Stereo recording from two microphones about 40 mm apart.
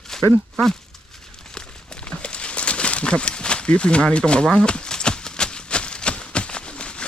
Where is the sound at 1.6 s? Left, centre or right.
Left.